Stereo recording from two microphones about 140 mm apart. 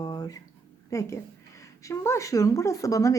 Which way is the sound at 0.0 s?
30° left (ahead or behind).